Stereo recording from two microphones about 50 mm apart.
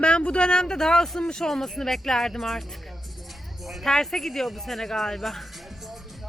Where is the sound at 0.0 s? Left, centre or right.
Left.